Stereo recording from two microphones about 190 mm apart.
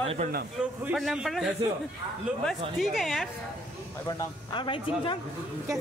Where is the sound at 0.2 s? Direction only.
40° right (ahead or behind).